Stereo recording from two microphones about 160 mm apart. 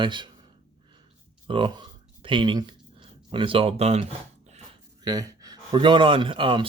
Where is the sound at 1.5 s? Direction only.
30° right (ahead or behind).